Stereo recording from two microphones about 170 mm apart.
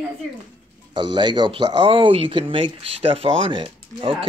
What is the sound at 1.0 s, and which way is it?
Speech, 25° right (ahead or behind).